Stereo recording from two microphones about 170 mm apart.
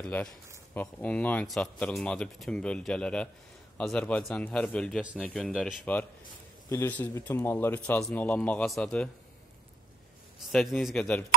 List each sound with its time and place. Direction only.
0.0 s speech: 5° left (ahead or behind)
6.7 s speech: 10° left (ahead or behind)
10.5 s speech: centre (ahead or behind)